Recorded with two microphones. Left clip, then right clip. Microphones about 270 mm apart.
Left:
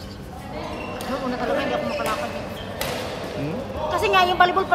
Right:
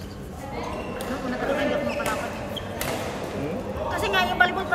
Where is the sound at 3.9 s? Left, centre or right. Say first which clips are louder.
Left 5 dB; centre.